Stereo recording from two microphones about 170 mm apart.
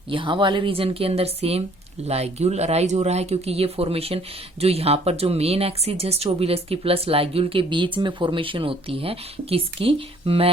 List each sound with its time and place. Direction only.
0.1 s speech: 30° right (ahead or behind)